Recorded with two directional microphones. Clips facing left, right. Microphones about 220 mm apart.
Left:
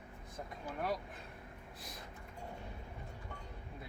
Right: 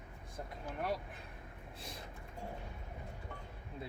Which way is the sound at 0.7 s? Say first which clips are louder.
Even; centre (ahead or behind).